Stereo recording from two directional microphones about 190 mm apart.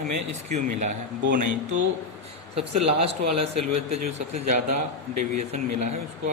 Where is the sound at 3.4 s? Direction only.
35° right (ahead or behind).